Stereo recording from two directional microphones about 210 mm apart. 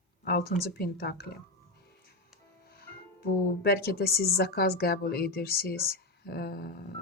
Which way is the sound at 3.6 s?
45° left (ahead or behind).